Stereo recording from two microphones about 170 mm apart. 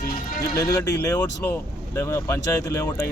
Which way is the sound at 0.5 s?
20° left (ahead or behind).